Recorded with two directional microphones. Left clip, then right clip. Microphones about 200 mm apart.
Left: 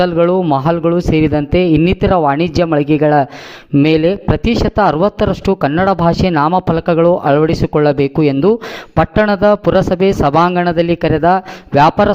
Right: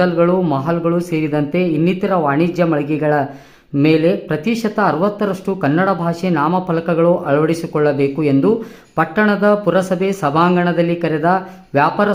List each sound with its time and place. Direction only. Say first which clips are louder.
0.0 s speech: left 2 dB; 40° left (ahead or behind)